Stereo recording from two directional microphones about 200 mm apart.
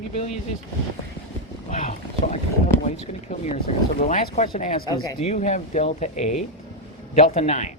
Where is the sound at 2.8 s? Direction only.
35° left (ahead or behind).